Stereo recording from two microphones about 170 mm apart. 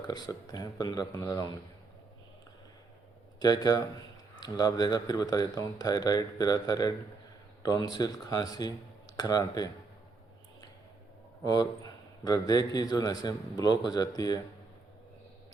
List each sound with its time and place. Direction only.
0.0 s a man's voice: 25° left (ahead or behind)
3.4 s a man's voice: 25° left (ahead or behind)
11.4 s a man's voice: 25° left (ahead or behind)